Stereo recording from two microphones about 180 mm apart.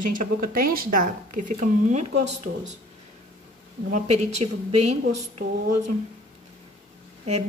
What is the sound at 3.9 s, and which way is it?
A woman's voice, 40° right (ahead or behind).